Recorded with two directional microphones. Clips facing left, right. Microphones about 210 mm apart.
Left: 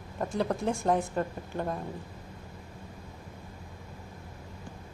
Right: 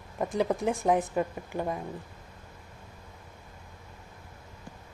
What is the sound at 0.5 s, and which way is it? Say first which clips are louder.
A woman's voice: right 2 dB; 15° right (ahead or behind).